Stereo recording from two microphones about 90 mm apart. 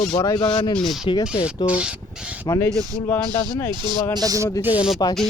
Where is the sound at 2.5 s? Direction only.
30° left (ahead or behind).